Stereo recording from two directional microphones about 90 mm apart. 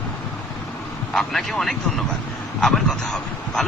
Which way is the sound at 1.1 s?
5° left (ahead or behind).